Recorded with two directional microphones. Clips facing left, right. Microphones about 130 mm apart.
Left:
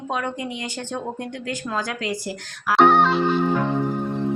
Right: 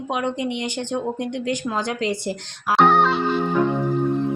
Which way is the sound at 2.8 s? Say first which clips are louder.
Left 1 dB; centre (ahead or behind).